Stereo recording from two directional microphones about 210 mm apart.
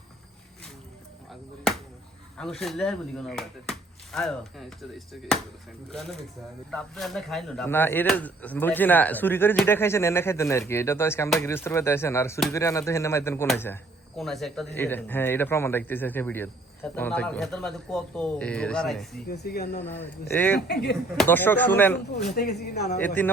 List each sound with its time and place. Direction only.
2.4 s a man's voice: centre (ahead or behind)
14.2 s a man's voice: centre (ahead or behind)
19.3 s speech: 50° left (ahead or behind)
19.8 s speech: 10° left (ahead or behind)
20.6 s speech: 50° left (ahead or behind)
21.2 s speech: 10° left (ahead or behind)
22.4 s speech: 50° left (ahead or behind)
23.0 s speech: 10° left (ahead or behind)